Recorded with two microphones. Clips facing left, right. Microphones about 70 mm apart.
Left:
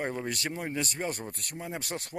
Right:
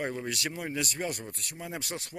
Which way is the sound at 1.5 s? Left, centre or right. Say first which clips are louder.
Left 1 dB; left.